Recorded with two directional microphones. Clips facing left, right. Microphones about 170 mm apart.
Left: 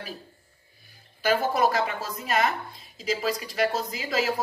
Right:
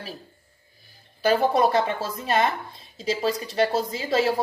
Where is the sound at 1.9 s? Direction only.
30° right (ahead or behind).